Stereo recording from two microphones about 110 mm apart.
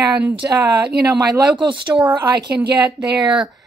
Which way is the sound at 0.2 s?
10° right (ahead or behind).